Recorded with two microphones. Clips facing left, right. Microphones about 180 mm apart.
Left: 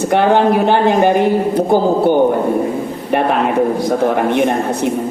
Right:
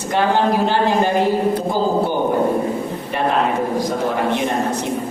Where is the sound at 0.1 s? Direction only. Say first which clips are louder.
Left 4 dB; 60° left (ahead or behind).